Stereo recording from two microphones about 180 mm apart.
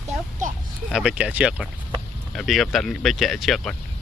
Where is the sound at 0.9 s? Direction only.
5° right (ahead or behind).